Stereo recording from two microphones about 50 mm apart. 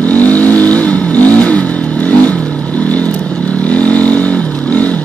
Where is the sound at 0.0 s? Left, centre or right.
Left.